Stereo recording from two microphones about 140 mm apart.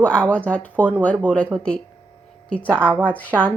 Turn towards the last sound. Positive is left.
turn(degrees=10)  # may be behind; listen again after turning